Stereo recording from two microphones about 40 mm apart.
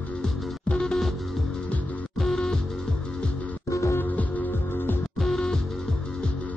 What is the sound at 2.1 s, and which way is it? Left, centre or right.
Music, centre.